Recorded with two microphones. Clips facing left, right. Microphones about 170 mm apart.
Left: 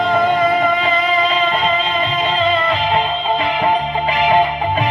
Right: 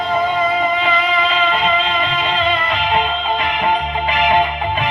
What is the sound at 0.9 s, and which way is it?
Music, 35° left (ahead or behind).